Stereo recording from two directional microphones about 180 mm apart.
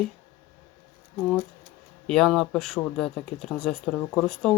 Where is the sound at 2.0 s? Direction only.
Centre (ahead or behind).